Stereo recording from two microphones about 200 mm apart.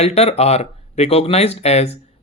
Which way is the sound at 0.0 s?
30° left (ahead or behind).